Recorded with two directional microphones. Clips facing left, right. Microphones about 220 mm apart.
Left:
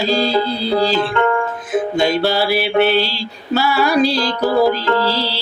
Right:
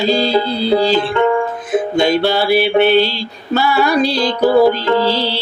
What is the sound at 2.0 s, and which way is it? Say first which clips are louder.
Music: right 2 dB; centre (ahead or behind).